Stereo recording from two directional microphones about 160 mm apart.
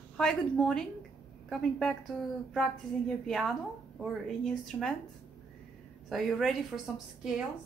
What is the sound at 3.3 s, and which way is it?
A woman's voice, centre (ahead or behind).